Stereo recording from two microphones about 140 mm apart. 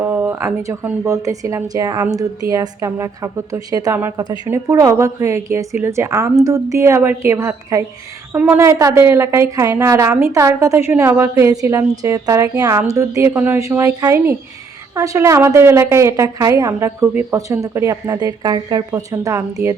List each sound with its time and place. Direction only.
0.0 s a woman's voice: 15° right (ahead or behind)